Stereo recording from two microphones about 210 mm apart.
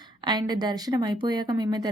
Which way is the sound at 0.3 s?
20° right (ahead or behind).